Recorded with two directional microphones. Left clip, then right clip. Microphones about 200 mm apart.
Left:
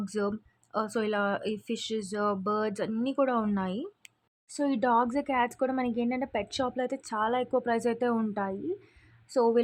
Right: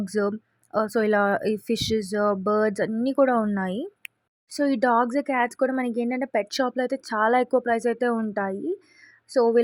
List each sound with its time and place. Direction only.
0.0 s speech: 20° right (ahead or behind)